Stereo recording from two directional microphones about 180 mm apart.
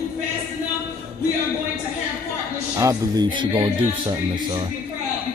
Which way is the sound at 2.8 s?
20° right (ahead or behind).